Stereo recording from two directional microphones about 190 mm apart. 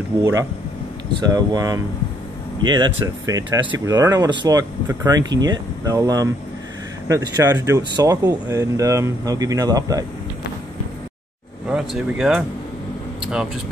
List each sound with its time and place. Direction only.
0.2 s speech: 15° right (ahead or behind)
11.7 s speech: 5° right (ahead or behind)